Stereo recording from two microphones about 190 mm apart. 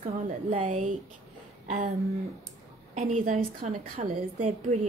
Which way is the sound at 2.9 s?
40° right (ahead or behind).